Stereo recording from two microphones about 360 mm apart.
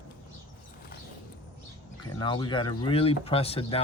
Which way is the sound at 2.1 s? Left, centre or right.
Centre.